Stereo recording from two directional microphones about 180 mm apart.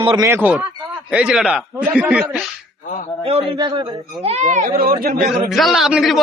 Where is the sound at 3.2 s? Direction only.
30° right (ahead or behind); by 4.9 s 50° right (ahead or behind).